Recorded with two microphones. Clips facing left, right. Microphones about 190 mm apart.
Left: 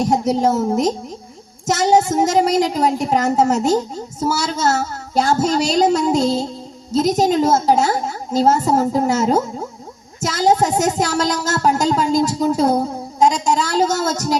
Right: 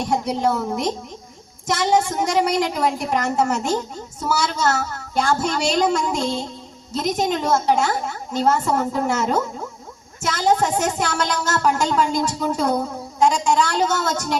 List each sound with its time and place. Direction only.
0.0 s a woman's voice: 40° left (ahead or behind)